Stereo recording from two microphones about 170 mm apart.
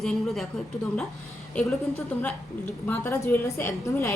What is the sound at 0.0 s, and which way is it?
Speech, centre (ahead or behind).